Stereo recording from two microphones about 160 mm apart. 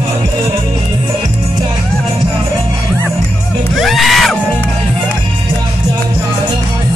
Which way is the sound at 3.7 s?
Centre (ahead or behind).